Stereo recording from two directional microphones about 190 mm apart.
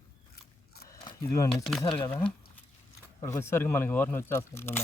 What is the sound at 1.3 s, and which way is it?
Speech, 15° left (ahead or behind).